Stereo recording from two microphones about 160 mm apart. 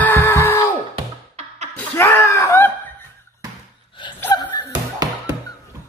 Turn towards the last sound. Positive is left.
turn(degrees=-25)  # may be behind; listen again after turning